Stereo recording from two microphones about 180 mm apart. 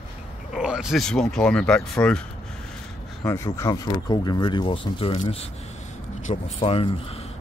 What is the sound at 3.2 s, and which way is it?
Speech, 15° left (ahead or behind).